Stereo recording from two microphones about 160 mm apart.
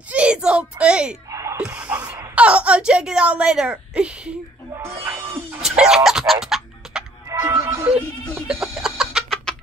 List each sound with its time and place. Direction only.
0.1 s a child's voice: 5° right (ahead or behind)
1.3 s a sound: 20° right (ahead or behind)
2.3 s speech: 10° right (ahead or behind)
4.7 s music: 15° right (ahead or behind)
7.2 s music: 20° right (ahead or behind); by 9.6 s centre (ahead or behind)